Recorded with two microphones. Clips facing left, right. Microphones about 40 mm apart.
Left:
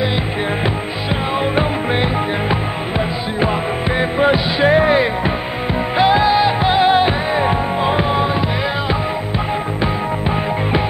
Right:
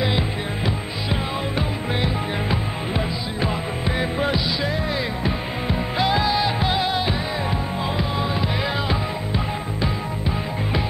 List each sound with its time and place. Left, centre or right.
1.5 s music: left
4.0 s music: left
4.6 s music: left
5.9 s music: left